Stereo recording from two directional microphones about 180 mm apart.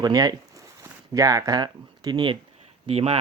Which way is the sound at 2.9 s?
35° right (ahead or behind).